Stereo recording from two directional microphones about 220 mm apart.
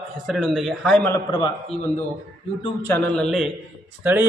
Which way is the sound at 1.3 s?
20° left (ahead or behind).